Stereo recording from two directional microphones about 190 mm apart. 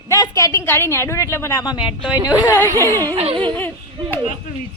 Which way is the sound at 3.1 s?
30° right (ahead or behind).